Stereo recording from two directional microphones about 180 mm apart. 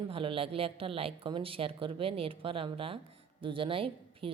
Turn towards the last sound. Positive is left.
turn(degrees=-30)  # may be behind; listen again after turning